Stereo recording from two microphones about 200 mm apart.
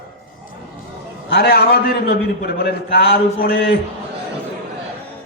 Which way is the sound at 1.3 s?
50° left (ahead or behind).